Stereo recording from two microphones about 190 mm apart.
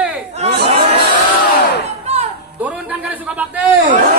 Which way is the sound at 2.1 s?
35° right (ahead or behind).